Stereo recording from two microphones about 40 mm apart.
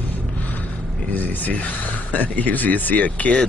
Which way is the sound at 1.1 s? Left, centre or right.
Left.